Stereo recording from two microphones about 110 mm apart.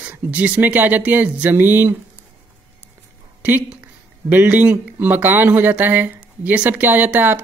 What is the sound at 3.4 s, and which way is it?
Speech, 10° right (ahead or behind).